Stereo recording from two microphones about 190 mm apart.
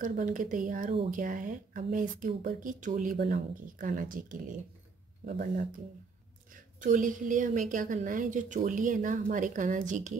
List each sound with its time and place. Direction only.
0.0 s a woman's voice: 45° right (ahead or behind)